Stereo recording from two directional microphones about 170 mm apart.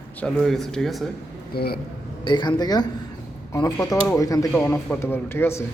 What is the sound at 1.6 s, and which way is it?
Speech, 65° left (ahead or behind).